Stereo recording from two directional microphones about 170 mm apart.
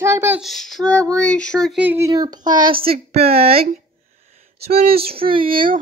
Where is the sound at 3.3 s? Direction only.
35° right (ahead or behind).